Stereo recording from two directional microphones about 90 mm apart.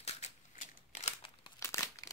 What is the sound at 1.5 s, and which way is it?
Crumpling, 35° left (ahead or behind).